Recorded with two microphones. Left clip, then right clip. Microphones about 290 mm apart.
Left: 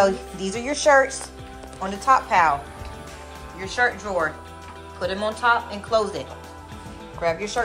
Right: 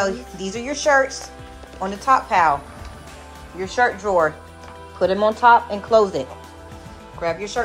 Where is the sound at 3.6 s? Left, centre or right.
Centre.